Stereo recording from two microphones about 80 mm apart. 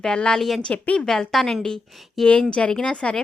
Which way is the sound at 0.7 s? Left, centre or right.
Centre.